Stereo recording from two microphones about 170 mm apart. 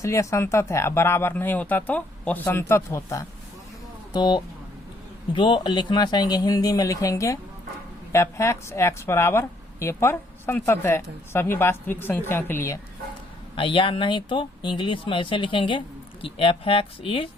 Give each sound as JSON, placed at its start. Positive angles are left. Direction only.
{"t": 0.0, "sound": "a woman's voice", "side_deg": 15}
{"t": 13.6, "sound": "speech", "side_deg": 30}